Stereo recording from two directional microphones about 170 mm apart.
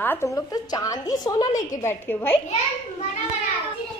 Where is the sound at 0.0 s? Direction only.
15° left (ahead or behind).